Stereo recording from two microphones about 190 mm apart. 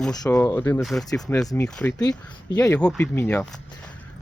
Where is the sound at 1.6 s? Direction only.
10° left (ahead or behind).